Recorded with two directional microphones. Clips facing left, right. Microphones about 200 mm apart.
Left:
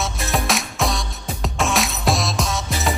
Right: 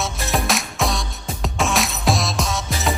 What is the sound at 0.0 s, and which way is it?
Music, centre (ahead or behind).